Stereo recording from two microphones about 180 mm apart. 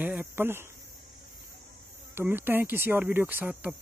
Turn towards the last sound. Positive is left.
turn(degrees=-10)  # may be behind; listen again after turning